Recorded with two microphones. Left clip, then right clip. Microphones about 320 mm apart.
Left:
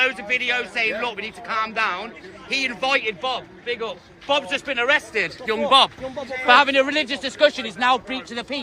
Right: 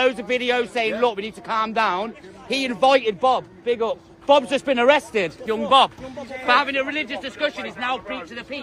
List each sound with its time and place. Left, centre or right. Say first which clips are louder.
0.0 s a man's voice: even; centre
5.5 s a man's voice: even; centre